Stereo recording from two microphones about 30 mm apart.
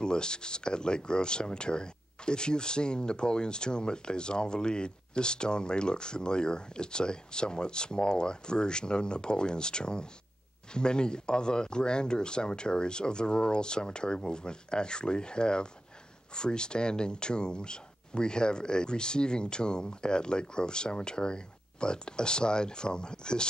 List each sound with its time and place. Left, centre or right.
0.0 s speech: left